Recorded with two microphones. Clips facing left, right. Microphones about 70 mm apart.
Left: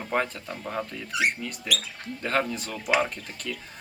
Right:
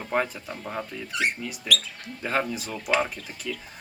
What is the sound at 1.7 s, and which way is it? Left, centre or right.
Speech, centre.